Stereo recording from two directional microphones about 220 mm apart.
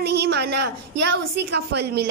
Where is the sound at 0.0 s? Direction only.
50° right (ahead or behind).